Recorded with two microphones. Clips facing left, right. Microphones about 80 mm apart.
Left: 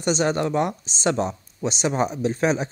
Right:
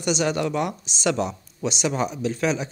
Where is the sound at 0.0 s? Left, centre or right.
Left.